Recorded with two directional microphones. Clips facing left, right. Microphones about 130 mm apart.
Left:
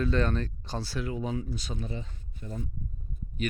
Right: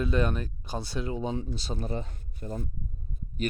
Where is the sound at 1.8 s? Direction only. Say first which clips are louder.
Right 4 dB; 50° right (ahead or behind).